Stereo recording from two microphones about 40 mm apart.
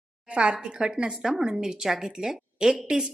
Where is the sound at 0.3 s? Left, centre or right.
Right.